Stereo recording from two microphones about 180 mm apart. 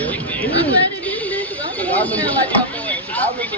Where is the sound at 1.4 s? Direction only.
10° left (ahead or behind).